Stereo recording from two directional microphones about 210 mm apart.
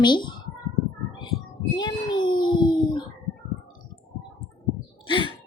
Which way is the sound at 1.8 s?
20° left (ahead or behind).